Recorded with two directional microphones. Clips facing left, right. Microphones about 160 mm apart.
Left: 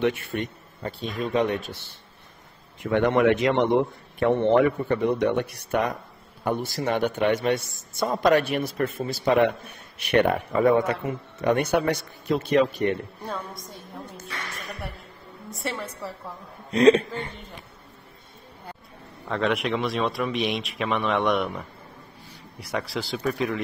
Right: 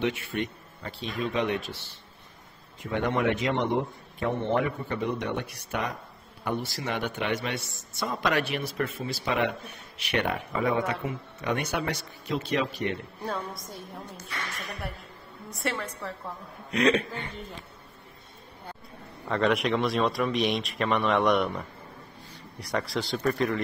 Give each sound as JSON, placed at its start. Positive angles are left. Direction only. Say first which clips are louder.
{"t": 0.0, "sound": "a man's voice", "louder": "left 4 dB", "side_deg": 50}
{"t": 2.8, "sound": "a man's voice", "louder": "left 7 dB", "side_deg": 65}
{"t": 13.2, "sound": "speech", "louder": "even", "side_deg": 0}
{"t": 15.5, "sound": "speech", "louder": "even", "side_deg": 0}
{"t": 16.7, "sound": "a man's voice", "louder": "left 7 dB", "side_deg": 35}
{"t": 19.2, "sound": "speech", "louder": "even", "side_deg": 0}